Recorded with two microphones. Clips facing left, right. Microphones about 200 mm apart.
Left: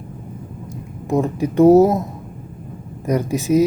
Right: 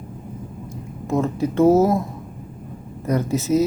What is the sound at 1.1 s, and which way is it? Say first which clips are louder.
Speech: left 3 dB; 15° left (ahead or behind).